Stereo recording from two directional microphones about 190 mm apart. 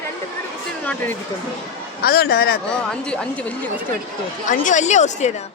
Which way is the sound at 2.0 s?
55° left (ahead or behind).